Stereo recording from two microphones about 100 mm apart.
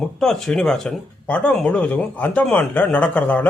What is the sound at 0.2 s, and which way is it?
Speech, 5° left (ahead or behind).